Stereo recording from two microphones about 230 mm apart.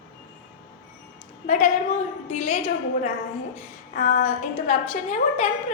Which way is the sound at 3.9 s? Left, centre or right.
Left.